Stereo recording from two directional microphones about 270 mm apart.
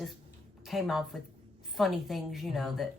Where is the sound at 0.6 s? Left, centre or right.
Centre.